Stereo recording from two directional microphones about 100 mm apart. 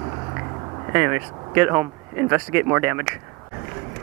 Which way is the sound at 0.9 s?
20° right (ahead or behind).